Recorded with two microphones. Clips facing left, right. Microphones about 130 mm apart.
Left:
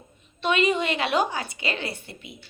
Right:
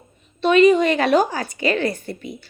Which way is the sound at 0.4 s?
40° right (ahead or behind).